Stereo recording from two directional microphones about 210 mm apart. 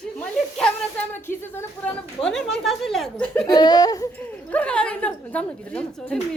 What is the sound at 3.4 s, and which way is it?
Speech, 20° left (ahead or behind).